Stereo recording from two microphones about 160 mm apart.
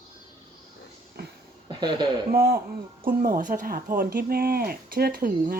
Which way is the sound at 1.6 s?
30° right (ahead or behind).